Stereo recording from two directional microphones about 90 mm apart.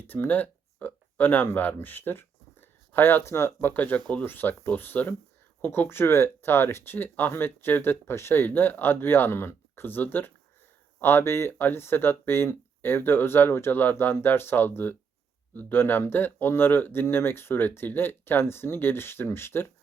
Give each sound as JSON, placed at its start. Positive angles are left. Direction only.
{"t": 0.1, "sound": "speech", "side_deg": 20}